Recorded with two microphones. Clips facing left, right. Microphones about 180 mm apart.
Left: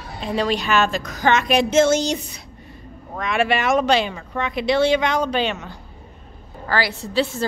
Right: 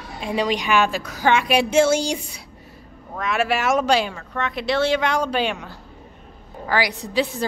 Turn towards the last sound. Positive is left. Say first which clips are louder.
# left 1 dB
turn(degrees=-15)  # may be behind; listen again after turning